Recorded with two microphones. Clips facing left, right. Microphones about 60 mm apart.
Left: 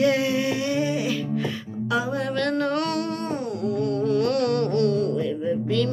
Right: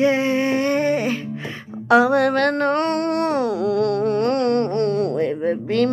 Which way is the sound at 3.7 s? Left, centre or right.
Right.